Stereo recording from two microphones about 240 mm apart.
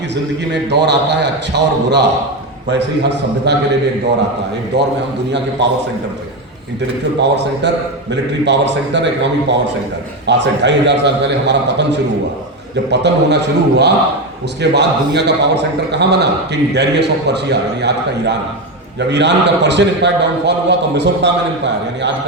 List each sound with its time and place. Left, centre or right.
0.5 s a man's voice: right
4.7 s a man's voice: right
7.2 s a man's voice: right